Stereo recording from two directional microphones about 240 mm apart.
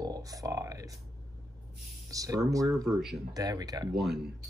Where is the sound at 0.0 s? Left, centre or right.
Centre.